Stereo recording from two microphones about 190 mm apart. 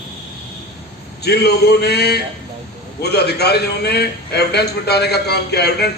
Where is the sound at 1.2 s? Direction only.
60° left (ahead or behind).